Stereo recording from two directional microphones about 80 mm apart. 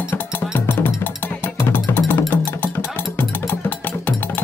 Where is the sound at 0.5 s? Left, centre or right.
Left.